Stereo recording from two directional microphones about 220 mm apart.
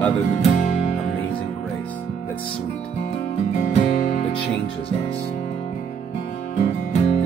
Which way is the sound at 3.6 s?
30° left (ahead or behind).